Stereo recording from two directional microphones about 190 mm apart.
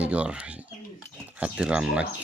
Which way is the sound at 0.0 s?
5° right (ahead or behind).